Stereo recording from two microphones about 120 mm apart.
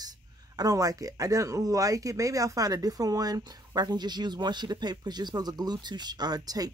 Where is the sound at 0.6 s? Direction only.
30° right (ahead or behind).